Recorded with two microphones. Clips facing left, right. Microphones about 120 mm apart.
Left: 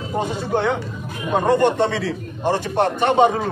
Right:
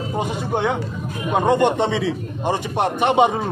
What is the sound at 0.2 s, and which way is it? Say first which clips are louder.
A man's voice: left 1 dB; 15° right (ahead or behind).